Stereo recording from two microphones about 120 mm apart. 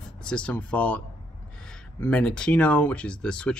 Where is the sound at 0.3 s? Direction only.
10° left (ahead or behind).